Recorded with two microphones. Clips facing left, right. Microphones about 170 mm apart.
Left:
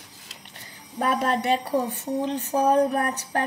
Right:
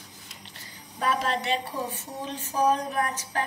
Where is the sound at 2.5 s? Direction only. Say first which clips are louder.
Left 2 dB; 55° left (ahead or behind).